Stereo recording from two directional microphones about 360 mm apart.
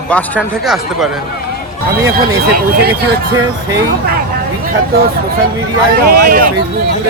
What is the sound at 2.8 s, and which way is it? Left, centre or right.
Speech, right.